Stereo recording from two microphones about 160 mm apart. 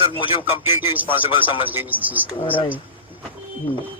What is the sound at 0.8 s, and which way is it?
Speech, 15° right (ahead or behind).